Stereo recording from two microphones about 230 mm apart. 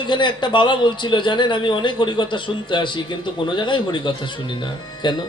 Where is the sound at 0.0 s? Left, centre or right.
Centre.